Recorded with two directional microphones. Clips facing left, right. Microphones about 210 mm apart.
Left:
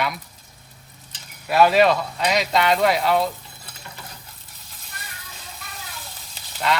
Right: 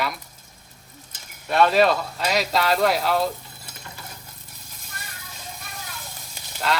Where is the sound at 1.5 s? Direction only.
5° left (ahead or behind).